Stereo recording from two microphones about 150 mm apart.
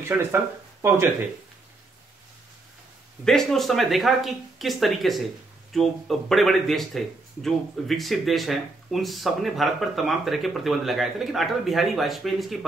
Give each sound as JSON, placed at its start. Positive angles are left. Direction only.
{"t": 0.1, "sound": "speech", "side_deg": -15}
{"t": 3.3, "sound": "speech", "side_deg": 0}